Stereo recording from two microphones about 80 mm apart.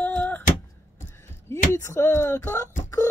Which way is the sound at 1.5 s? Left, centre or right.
Left.